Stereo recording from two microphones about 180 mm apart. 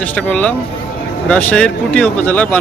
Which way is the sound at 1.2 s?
5° left (ahead or behind).